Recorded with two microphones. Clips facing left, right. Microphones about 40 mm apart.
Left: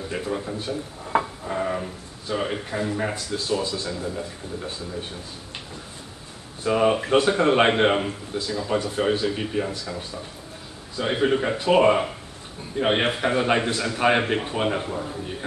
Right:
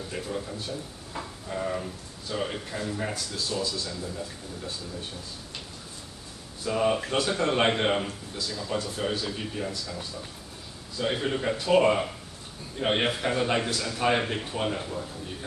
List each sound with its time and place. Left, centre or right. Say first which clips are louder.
0.1 s a man's voice: left 6 dB; left
1.0 s a sound: left 13 dB; left
1.5 s a man's voice: left 4 dB; left
6.6 s a man's voice: left 5 dB; left